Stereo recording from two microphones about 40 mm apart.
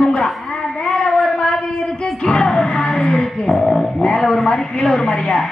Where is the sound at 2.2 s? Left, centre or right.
Centre.